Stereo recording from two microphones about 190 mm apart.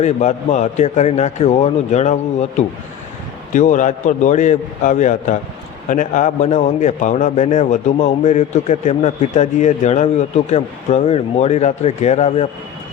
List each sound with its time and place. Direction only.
0.0 s a man's voice: 40° left (ahead or behind)